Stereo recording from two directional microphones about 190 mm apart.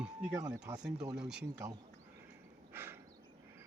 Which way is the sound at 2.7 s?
10° right (ahead or behind).